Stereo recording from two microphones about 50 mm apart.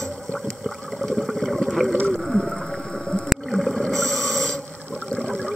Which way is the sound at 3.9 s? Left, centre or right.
Centre.